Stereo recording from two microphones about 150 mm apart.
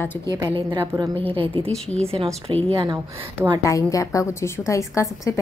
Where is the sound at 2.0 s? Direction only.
40° right (ahead or behind).